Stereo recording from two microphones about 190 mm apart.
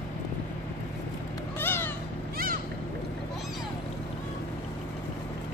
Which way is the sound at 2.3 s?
50° right (ahead or behind).